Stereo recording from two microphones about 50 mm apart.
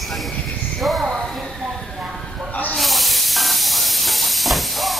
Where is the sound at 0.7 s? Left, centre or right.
Centre.